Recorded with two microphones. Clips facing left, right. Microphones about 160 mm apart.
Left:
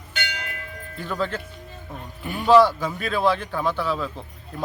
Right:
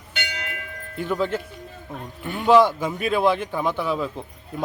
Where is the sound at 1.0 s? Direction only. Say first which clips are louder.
Right 3 dB; 15° right (ahead or behind).